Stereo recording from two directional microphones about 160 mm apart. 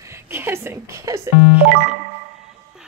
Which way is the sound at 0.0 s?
15° right (ahead or behind).